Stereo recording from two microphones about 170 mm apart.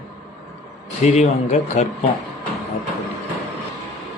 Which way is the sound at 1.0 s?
40° left (ahead or behind).